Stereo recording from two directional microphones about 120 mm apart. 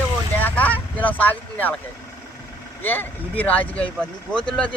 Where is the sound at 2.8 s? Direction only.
15° left (ahead or behind).